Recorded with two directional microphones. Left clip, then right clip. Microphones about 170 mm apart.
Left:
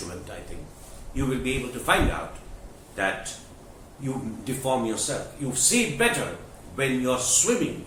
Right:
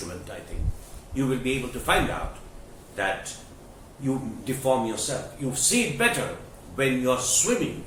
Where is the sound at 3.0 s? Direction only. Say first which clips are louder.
Even; 15° left (ahead or behind).